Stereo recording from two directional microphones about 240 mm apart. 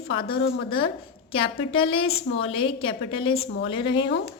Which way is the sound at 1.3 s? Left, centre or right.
Left.